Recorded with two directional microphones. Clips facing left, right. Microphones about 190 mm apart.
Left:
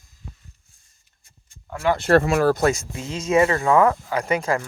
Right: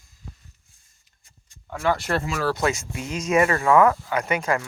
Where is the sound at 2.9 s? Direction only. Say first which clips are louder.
Left 2 dB; 30° left (ahead or behind).